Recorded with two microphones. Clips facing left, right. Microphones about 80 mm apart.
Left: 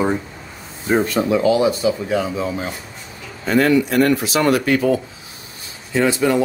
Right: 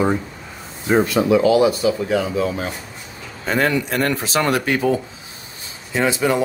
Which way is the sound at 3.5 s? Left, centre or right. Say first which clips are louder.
Left 4 dB; right.